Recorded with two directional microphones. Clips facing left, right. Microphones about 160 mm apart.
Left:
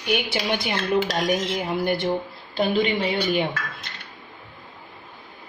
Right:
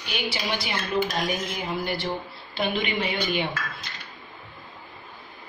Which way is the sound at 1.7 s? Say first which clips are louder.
Left 4 dB; 55° left (ahead or behind).